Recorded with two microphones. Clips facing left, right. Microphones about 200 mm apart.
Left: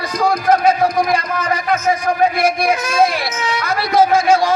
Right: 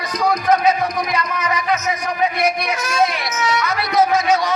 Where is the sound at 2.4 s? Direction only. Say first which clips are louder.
Left 4 dB; 30° left (ahead or behind).